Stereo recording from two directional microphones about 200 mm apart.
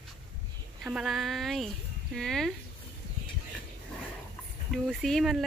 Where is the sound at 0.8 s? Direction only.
5° right (ahead or behind).